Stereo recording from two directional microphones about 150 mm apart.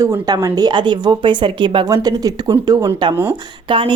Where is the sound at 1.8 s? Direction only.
25° right (ahead or behind).